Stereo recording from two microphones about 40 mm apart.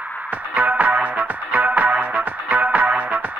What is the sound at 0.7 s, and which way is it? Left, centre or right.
Music, right.